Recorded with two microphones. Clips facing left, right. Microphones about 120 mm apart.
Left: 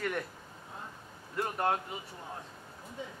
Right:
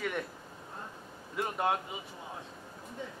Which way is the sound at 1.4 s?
5° right (ahead or behind).